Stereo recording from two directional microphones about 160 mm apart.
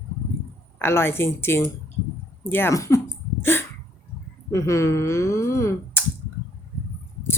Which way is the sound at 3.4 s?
15° left (ahead or behind).